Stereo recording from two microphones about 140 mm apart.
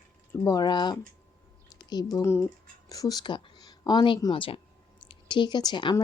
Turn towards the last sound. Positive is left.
turn(degrees=35)  # may be behind; listen again after turning